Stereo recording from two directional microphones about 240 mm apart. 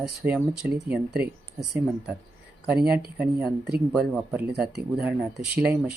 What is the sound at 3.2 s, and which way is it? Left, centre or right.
Speech, centre.